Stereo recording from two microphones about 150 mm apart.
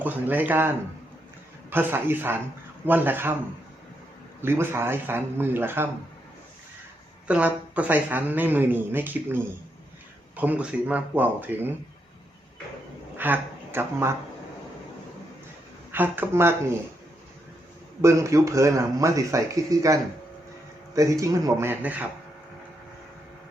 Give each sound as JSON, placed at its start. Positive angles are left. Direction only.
{"t": 0.0, "sound": "speech", "side_deg": -10}
{"t": 4.4, "sound": "speech", "side_deg": -15}
{"t": 7.3, "sound": "speech", "side_deg": -10}
{"t": 13.1, "sound": "speech", "side_deg": -10}
{"t": 15.9, "sound": "speech", "side_deg": -15}
{"t": 18.0, "sound": "speech", "side_deg": -20}